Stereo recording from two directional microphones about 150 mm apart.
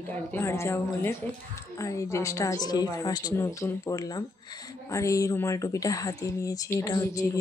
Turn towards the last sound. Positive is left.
turn(degrees=20)  # may be behind; listen again after turning